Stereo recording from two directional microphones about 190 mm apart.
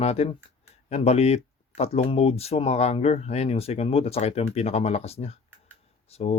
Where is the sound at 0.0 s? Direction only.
35° left (ahead or behind).